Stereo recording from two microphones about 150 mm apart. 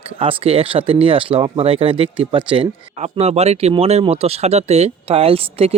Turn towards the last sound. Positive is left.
turn(degrees=-40)  # may be behind; listen again after turning